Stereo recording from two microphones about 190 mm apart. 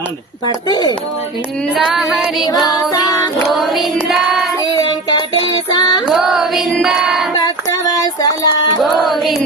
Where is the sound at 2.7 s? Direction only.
20° left (ahead or behind).